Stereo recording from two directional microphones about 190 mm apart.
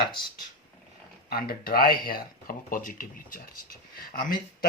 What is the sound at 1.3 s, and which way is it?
Speech, 50° left (ahead or behind).